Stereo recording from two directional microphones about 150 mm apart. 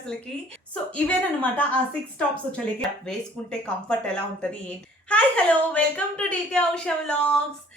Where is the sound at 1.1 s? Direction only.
10° left (ahead or behind).